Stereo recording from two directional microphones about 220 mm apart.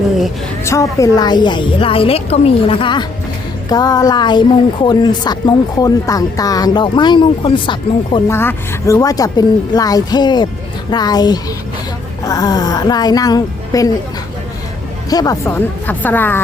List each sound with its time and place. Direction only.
0.6 s speech: 15° left (ahead or behind)
8.3 s a woman's voice: 10° left (ahead or behind)
15.1 s a woman's voice: 15° left (ahead or behind)